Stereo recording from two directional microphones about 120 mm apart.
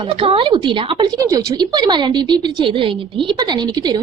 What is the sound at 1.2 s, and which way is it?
A woman's voice, 30° right (ahead or behind).